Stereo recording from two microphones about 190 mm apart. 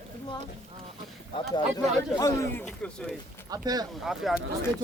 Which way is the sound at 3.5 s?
20° right (ahead or behind).